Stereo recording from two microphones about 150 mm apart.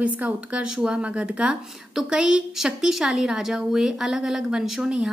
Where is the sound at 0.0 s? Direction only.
10° right (ahead or behind).